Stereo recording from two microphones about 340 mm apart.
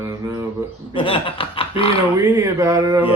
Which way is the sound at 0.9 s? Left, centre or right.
Centre.